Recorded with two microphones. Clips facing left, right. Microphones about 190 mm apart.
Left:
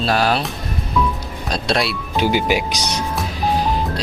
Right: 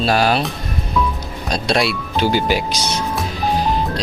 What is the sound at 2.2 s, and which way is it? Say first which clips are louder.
Speech: even; 15° left (ahead or behind).